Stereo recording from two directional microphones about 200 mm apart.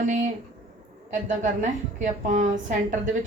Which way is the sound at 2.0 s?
40° right (ahead or behind).